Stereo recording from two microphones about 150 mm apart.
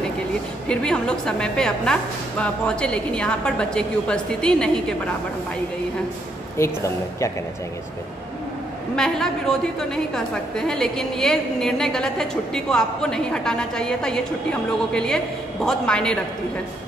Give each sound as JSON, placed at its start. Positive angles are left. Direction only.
{"t": 0.7, "sound": "a woman's voice", "side_deg": 5}
{"t": 6.6, "sound": "speech", "side_deg": 20}
{"t": 8.9, "sound": "a woman's voice", "side_deg": 5}